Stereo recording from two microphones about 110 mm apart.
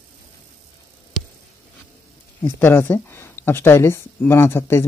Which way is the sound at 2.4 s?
20° left (ahead or behind).